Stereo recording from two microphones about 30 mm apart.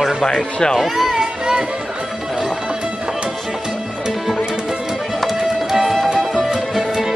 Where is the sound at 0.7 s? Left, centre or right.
Centre.